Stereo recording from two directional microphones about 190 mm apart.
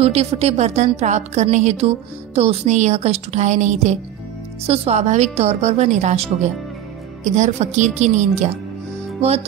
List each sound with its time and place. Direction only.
0.0 s a woman's voice: 35° right (ahead or behind)